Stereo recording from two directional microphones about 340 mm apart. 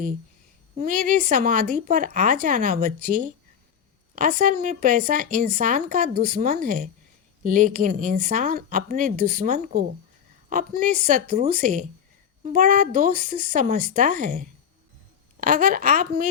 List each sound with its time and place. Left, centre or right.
0.8 s speech: right